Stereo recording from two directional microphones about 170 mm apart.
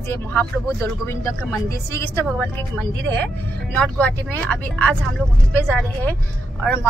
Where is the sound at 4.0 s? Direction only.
5° left (ahead or behind).